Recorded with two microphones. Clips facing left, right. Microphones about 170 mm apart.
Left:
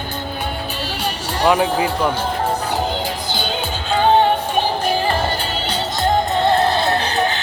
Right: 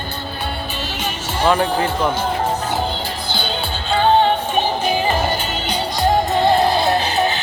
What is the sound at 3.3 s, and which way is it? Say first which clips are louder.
Music: left 1 dB; 10° left (ahead or behind).